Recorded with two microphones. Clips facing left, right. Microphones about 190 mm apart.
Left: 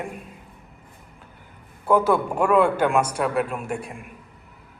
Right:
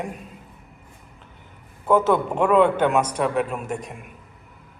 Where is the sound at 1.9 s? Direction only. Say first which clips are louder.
Right 1 dB; 10° left (ahead or behind).